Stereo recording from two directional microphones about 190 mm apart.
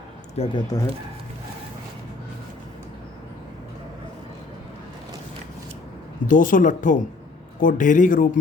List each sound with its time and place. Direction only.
0.3 s speech: 25° left (ahead or behind)
6.2 s speech: 45° left (ahead or behind)